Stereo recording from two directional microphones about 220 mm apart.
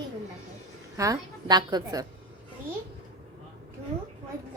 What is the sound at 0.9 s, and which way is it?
A woman's voice, 15° right (ahead or behind).